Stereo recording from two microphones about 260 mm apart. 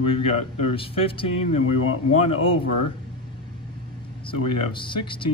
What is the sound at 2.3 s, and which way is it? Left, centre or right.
Speech, left.